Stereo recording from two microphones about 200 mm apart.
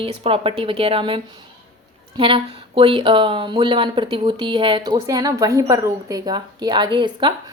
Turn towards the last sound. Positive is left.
turn(degrees=-25)  # may be behind; listen again after turning